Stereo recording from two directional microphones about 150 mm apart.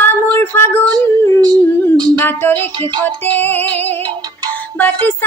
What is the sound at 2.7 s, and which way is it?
Music, 30° right (ahead or behind).